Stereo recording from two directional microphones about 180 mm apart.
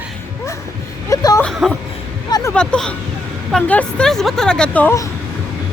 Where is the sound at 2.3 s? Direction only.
15° left (ahead or behind).